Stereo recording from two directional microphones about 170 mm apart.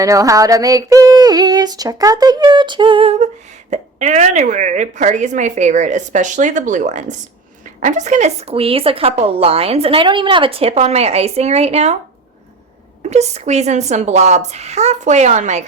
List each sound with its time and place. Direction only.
0.0 s female singing: 20° right (ahead or behind); by 3.2 s 35° right (ahead or behind)
3.7 s a woman's voice: 45° right (ahead or behind)
13.0 s a woman's voice: 40° right (ahead or behind)